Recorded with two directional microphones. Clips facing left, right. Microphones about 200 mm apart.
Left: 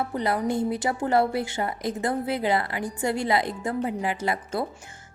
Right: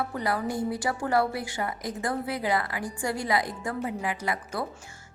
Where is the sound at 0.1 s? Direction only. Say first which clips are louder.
Left 4 dB; 25° left (ahead or behind).